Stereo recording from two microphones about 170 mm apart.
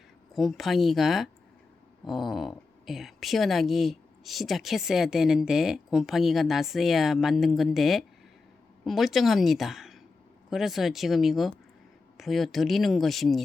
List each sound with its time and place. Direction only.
0.3 s a woman's voice: centre (ahead or behind)